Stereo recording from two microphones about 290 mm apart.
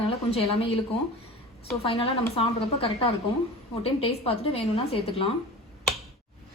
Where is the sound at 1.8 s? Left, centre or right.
Centre.